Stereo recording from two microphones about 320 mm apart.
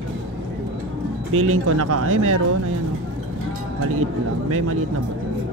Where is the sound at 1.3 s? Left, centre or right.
Right.